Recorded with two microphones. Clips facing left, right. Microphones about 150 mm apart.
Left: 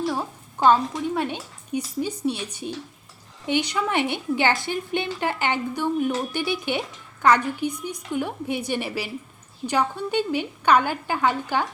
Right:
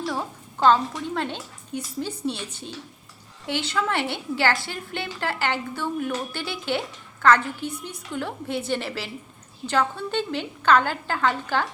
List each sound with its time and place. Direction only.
0.0 s a woman's voice: 10° left (ahead or behind)